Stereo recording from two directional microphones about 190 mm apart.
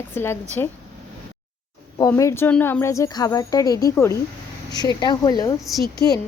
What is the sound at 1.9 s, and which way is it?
A woman's voice, 15° left (ahead or behind).